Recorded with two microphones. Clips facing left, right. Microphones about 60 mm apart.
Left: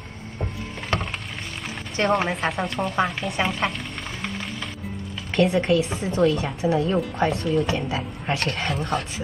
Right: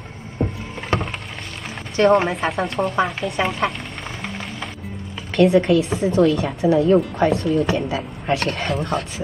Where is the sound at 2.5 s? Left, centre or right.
Right.